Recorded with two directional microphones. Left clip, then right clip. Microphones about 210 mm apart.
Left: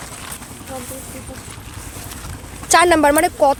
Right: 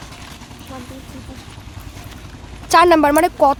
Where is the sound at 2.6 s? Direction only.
10° right (ahead or behind).